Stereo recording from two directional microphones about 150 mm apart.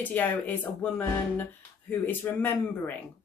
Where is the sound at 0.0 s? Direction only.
10° left (ahead or behind).